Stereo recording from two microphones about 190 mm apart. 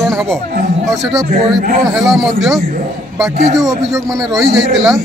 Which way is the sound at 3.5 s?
15° right (ahead or behind).